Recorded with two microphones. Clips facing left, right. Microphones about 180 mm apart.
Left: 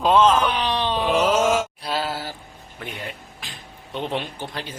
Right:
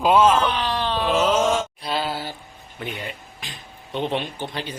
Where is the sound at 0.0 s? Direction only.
10° right (ahead or behind).